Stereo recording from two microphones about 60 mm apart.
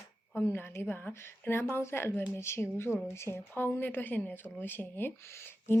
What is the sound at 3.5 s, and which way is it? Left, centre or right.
A woman's voice, left.